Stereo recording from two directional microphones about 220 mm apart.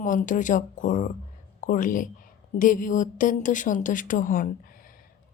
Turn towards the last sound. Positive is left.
turn(degrees=40)  # may be behind; listen again after turning